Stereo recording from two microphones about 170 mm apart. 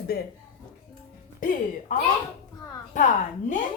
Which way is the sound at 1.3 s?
55° left (ahead or behind).